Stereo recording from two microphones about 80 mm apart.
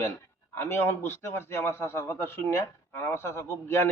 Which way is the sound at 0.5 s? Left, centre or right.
Left.